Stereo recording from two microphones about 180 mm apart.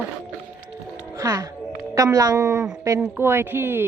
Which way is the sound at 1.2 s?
20° right (ahead or behind).